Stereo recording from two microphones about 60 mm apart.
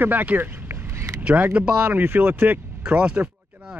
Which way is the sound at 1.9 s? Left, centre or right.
Right.